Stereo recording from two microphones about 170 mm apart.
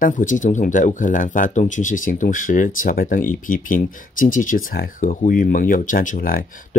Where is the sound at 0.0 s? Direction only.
50° left (ahead or behind).